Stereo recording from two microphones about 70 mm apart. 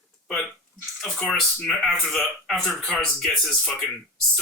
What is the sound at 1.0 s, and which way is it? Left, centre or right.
Speech, centre.